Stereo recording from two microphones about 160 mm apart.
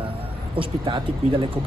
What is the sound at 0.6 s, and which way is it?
Speech, 35° right (ahead or behind).